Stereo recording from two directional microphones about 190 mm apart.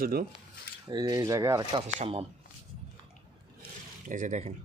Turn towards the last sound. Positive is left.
turn(degrees=-40)  # may be behind; listen again after turning